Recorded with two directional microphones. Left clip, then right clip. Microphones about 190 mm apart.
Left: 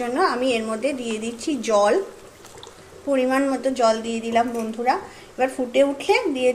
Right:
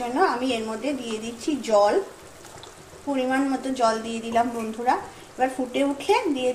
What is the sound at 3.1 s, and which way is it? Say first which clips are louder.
A woman's voice: left 4 dB; 30° left (ahead or behind).